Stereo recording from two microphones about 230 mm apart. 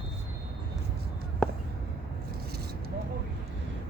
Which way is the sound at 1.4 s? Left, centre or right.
Centre.